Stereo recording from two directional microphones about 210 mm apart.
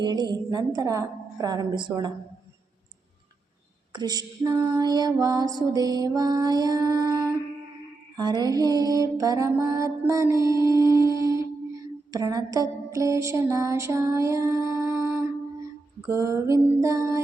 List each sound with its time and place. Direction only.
0.0 s a woman's voice: 20° right (ahead or behind)
3.9 s female singing: 20° right (ahead or behind)
8.1 s mantra: 20° right (ahead or behind)
16.0 s female singing: 15° right (ahead or behind)